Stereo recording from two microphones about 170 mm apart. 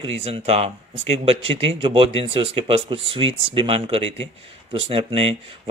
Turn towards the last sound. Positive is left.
turn(degrees=-35)  # may be behind; listen again after turning